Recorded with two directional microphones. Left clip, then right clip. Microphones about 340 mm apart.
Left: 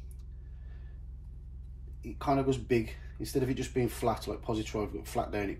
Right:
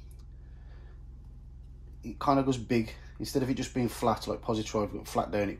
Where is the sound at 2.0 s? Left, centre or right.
Centre.